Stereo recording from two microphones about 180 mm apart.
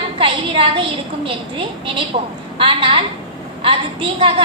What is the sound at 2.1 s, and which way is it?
Speech, 30° right (ahead or behind).